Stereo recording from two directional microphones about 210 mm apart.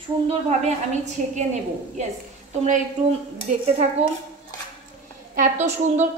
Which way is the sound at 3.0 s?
35° right (ahead or behind).